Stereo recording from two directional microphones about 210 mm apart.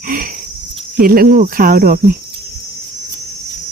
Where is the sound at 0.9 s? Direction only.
45° right (ahead or behind).